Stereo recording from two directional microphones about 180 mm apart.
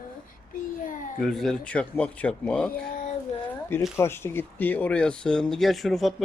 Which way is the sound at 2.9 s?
50° left (ahead or behind).